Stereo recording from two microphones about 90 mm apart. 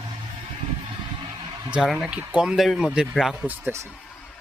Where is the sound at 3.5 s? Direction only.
20° right (ahead or behind).